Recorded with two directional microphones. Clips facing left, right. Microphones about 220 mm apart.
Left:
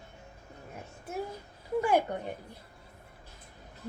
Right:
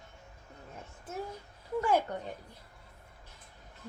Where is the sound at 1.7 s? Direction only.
15° left (ahead or behind).